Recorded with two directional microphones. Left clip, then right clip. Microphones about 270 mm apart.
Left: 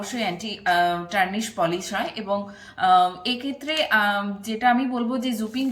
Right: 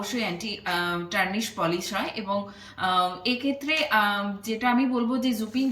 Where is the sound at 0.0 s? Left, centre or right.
Centre.